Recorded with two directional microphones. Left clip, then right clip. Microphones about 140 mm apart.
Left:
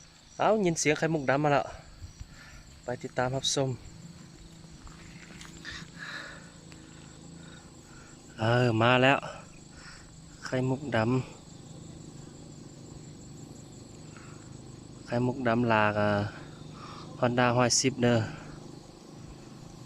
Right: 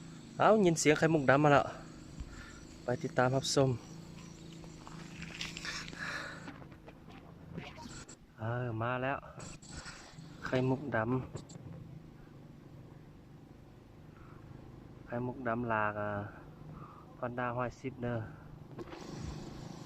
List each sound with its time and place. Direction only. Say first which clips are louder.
0.3 s speech: left 1 dB; 5° right (ahead or behind)
2.8 s speech: even; 5° right (ahead or behind)
5.3 s a sound: right 3 dB; 5° right (ahead or behind)
8.4 s speech: left 13 dB; 15° left (ahead or behind)
10.4 s speech: left 2 dB; centre (ahead or behind)
15.0 s speech: left 8 dB; 15° left (ahead or behind)
16.8 s a sound: left 12 dB; 20° left (ahead or behind)
17.7 s speech: left 16 dB; 5° left (ahead or behind)
18.0 s speech: left 13 dB; 20° left (ahead or behind)